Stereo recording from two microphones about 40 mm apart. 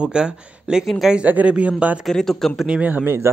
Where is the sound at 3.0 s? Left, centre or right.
Right.